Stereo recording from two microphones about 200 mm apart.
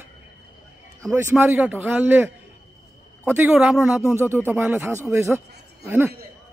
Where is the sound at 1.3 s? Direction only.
10° right (ahead or behind).